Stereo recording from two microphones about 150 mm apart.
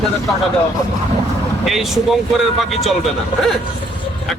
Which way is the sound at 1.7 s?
Centre (ahead or behind).